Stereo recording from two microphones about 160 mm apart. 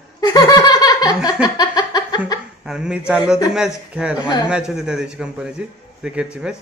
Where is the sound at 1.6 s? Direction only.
25° left (ahead or behind).